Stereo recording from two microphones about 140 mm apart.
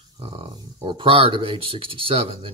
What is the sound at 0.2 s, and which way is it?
Speech, 40° right (ahead or behind).